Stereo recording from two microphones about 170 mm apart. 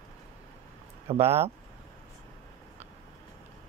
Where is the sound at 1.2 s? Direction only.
15° right (ahead or behind).